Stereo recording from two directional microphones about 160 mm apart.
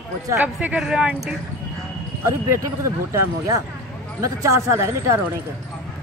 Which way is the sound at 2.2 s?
15° right (ahead or behind).